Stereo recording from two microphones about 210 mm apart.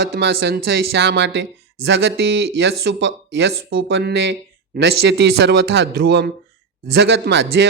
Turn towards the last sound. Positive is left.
turn(degrees=-55)  # may be behind; listen again after turning